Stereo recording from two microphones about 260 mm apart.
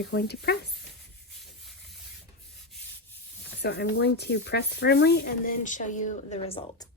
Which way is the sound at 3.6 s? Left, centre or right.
Left.